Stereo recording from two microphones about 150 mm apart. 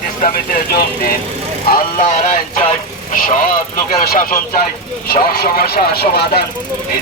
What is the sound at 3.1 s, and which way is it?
Speech, 65° left (ahead or behind).